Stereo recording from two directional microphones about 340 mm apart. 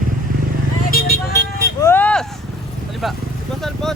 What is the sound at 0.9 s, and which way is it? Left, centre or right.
Vehicle, left.